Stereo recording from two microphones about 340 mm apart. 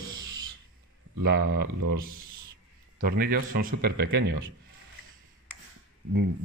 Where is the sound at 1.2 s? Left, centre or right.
Right.